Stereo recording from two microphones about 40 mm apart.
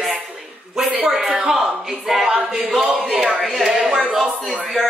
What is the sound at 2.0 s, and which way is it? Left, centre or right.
Speech, centre.